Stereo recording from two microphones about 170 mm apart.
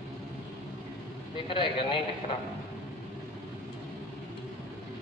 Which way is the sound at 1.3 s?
30° left (ahead or behind).